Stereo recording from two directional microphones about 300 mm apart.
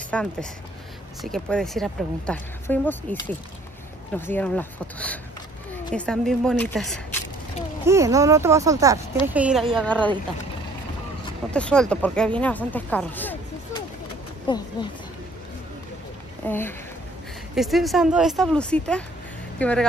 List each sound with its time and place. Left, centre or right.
0.1 s speech: centre
4.3 s speech: centre
7.8 s speech: centre
11.5 s speech: centre
14.5 s speech: centre
16.4 s speech: centre